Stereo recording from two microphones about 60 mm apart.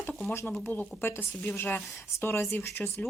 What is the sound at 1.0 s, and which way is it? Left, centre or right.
Speech, left.